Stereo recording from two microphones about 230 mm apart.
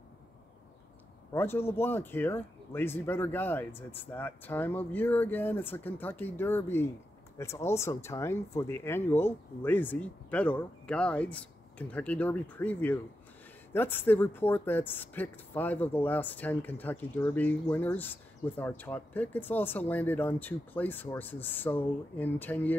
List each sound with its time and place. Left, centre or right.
1.3 s speech: centre